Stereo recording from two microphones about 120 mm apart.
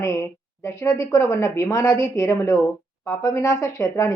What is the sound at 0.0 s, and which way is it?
Speech, 25° left (ahead or behind).